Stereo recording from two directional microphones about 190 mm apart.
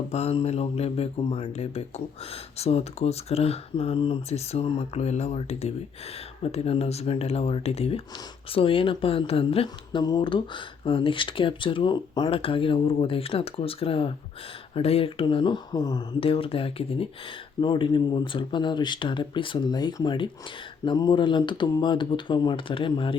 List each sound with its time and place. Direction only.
0.1 s speech: 35° left (ahead or behind)